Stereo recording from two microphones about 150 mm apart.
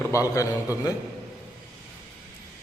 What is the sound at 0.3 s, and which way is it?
Speech, 20° left (ahead or behind).